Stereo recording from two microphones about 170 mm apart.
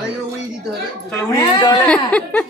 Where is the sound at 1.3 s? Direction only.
20° left (ahead or behind).